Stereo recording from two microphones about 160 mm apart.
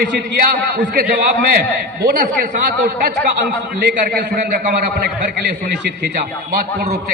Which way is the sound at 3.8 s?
80° right.